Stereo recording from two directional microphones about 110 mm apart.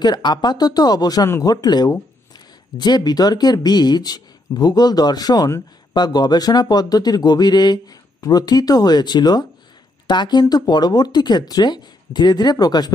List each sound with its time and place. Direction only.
0.0 s speech: 40° left (ahead or behind)